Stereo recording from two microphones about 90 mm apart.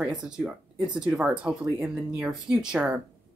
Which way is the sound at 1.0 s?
10° right (ahead or behind).